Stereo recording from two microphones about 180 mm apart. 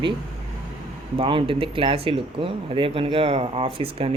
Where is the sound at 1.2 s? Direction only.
30° right (ahead or behind).